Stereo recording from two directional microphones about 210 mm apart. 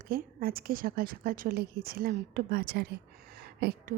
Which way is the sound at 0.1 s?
45° right (ahead or behind).